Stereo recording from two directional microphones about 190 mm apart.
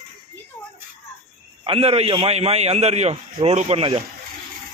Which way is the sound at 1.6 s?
30° right (ahead or behind).